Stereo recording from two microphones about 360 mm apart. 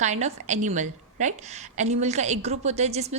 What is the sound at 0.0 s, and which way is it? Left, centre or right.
A woman's voice, centre.